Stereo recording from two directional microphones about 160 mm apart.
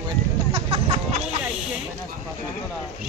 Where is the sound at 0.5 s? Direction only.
35° right (ahead or behind).